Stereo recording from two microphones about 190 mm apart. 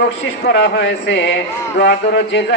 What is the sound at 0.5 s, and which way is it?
A man's voice, 65° left (ahead or behind).